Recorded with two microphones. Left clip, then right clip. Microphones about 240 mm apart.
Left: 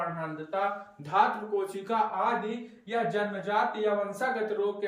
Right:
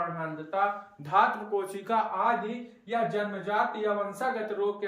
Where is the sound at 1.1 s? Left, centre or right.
Centre.